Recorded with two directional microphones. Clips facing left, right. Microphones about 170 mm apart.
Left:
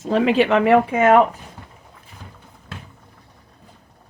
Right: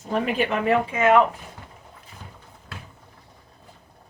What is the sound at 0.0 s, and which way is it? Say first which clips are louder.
Speech: left 7 dB; 90° left.